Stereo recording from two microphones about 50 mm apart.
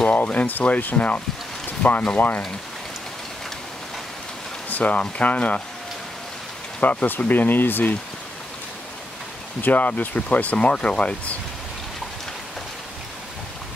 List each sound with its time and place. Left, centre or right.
0.1 s speech: left
4.6 s a sound: left
5.1 s speech: left
6.8 s speech: left
9.6 s speech: left